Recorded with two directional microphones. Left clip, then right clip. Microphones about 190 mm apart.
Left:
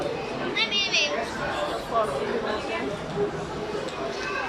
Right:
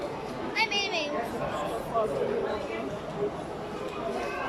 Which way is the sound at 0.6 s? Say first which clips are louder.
Left 4 dB; 55° right (ahead or behind).